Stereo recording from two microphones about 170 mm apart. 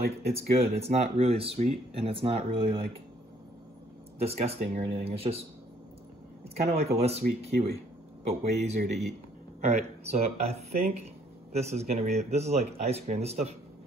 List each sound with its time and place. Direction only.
0.2 s speech: 35° right (ahead or behind)
4.2 s speech: 35° right (ahead or behind)
6.5 s speech: 35° right (ahead or behind)